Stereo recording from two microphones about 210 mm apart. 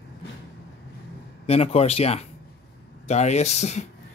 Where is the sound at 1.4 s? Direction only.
30° left (ahead or behind).